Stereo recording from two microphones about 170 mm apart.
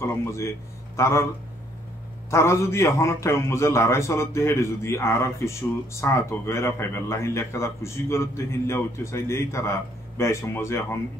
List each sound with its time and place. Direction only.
0.0 s a man's voice: 15° left (ahead or behind)
2.3 s a man's voice: 15° left (ahead or behind)